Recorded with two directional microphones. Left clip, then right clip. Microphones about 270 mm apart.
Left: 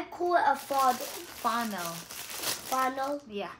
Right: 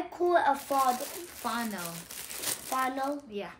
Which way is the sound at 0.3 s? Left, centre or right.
Centre.